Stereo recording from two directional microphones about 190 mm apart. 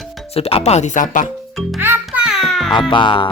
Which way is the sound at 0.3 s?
30° left (ahead or behind).